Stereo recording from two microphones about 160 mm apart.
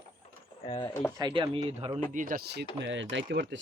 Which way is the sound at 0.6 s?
30° left (ahead or behind).